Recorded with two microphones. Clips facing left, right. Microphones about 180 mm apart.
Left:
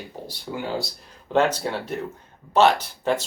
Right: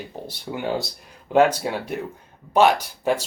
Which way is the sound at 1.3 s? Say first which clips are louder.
Right 3 dB; 10° right (ahead or behind).